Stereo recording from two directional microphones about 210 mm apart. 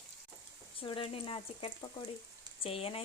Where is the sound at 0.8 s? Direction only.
25° left (ahead or behind).